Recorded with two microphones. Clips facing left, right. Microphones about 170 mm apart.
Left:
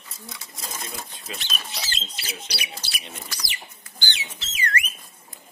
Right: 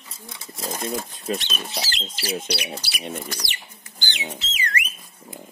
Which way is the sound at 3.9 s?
15° right (ahead or behind).